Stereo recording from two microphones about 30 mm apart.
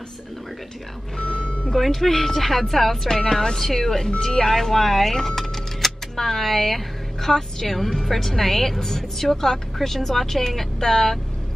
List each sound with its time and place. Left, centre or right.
1.2 s speech: left
1.8 s speech: centre